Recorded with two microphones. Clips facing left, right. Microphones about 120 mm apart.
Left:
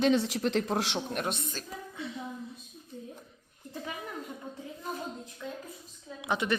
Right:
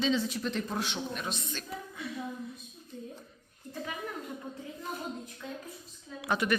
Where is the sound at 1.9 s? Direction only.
25° left (ahead or behind).